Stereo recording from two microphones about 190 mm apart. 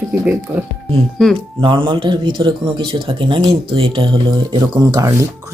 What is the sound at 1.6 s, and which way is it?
A man's voice, 25° right (ahead or behind).